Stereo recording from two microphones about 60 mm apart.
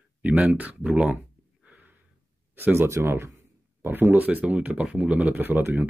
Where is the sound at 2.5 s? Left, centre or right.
Right.